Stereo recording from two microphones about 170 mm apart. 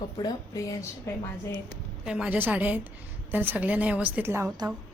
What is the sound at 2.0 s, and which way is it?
A woman's voice, 5° right (ahead or behind).